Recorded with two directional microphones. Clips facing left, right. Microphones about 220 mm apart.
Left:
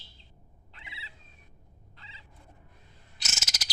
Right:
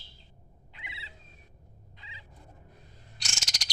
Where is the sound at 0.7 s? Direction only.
15° right (ahead or behind).